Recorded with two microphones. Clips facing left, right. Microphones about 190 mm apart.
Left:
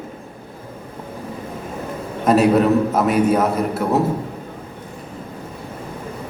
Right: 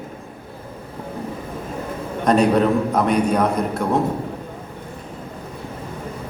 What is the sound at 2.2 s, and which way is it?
A man's voice, 5° left (ahead or behind).